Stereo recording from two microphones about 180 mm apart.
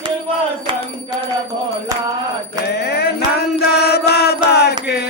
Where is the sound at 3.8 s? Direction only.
65° left (ahead or behind).